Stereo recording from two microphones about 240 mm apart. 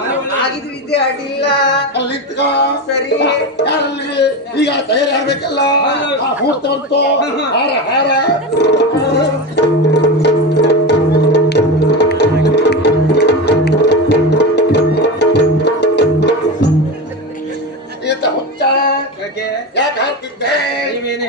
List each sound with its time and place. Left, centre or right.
0.3 s speech: left
9.9 s music: left
18.0 s music: left
19.4 s a sound: left
20.6 s male singing: left